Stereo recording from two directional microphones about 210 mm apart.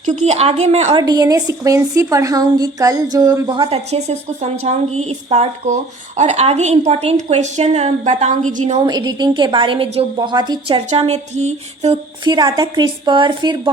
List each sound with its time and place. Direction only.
0.0 s a woman's voice: 35° right (ahead or behind)
1.0 s a woman's voice: 20° right (ahead or behind); by 8.8 s 35° right (ahead or behind)
8.8 s a woman's voice: 20° right (ahead or behind)
10.8 s a woman's voice: 30° right (ahead or behind)
12.2 s a woman's voice: 20° right (ahead or behind)